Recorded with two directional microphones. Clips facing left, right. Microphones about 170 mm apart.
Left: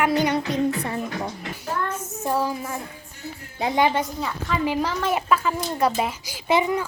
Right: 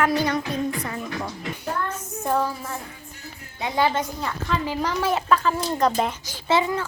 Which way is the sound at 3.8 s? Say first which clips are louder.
Left 1 dB; 15° left (ahead or behind).